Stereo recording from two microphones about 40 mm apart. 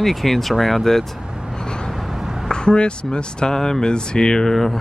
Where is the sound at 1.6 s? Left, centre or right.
Left.